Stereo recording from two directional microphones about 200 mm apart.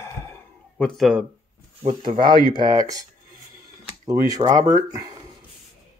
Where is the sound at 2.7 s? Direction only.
15° right (ahead or behind).